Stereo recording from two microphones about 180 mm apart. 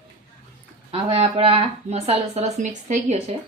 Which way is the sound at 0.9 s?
30° right (ahead or behind).